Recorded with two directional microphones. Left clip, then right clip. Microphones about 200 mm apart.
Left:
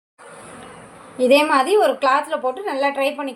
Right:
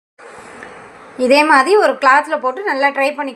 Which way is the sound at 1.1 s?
15° right (ahead or behind).